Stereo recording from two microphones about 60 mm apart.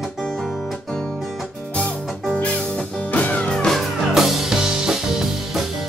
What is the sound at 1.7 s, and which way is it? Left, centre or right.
Music, centre.